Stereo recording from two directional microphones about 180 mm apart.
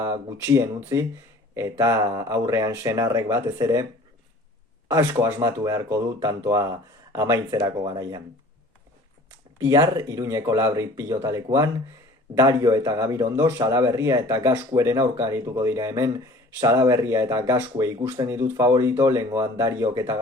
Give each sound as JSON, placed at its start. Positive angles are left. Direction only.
{"t": 0.0, "sound": "a man's voice", "side_deg": -15}
{"t": 4.9, "sound": "a man's voice", "side_deg": -15}
{"t": 9.6, "sound": "a man's voice", "side_deg": -20}